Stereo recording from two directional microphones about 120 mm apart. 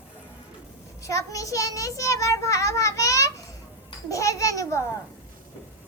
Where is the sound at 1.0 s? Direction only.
25° left (ahead or behind).